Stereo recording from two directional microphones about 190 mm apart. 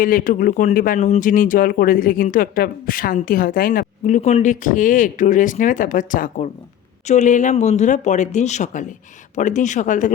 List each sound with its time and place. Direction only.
0.0 s speech: 45° left (ahead or behind)